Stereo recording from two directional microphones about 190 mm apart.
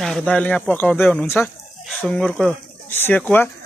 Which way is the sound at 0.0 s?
5° left (ahead or behind).